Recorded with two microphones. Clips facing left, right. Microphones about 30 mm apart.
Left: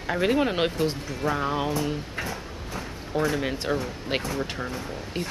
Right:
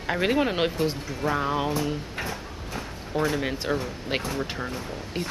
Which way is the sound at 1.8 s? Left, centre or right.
Centre.